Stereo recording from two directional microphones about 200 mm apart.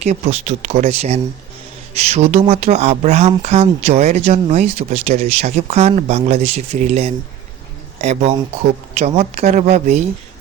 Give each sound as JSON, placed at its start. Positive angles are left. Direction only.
{"t": 0.0, "sound": "speech", "side_deg": -35}